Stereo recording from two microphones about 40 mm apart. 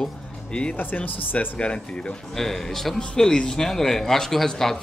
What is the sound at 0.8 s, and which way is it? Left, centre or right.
Speech, left.